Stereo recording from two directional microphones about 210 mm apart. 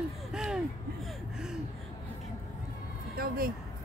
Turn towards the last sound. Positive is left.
turn(degrees=-45)  # may be behind; listen again after turning